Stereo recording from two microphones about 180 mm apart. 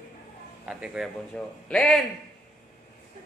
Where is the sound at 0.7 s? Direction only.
5° right (ahead or behind).